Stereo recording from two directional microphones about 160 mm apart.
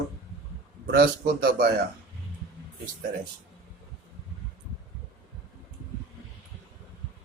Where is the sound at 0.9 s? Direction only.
90° right.